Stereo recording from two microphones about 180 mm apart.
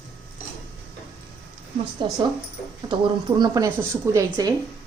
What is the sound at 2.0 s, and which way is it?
Speech, 25° right (ahead or behind).